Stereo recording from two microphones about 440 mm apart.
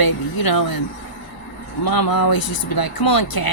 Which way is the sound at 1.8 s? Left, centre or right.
Left.